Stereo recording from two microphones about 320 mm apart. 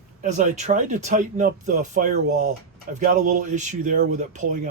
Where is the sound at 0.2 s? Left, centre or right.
Right.